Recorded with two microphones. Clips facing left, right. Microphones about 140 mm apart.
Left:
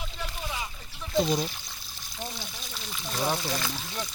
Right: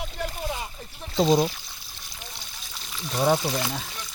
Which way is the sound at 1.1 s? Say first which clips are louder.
Right 5 dB; 90° right.